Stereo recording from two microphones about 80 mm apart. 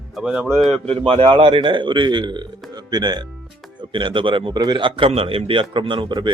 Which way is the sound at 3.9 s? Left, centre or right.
Right.